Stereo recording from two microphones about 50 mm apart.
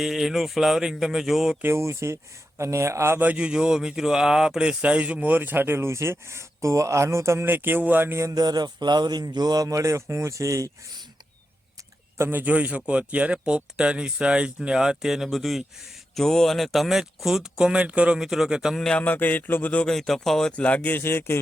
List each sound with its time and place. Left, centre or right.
0.0 s speech: centre
1.6 s speech: right
3.2 s speech: right
3.4 s speech: centre; by 7.4 s right
7.4 s speech: right
9.6 s speech: right
12.1 s speech: right
12.4 s speech: right; by 17.7 s centre
17.7 s speech: right
18.2 s speech: centre
19.0 s a sound: left
19.8 s speech: centre
20.6 s a sound: left
21.0 s speech: left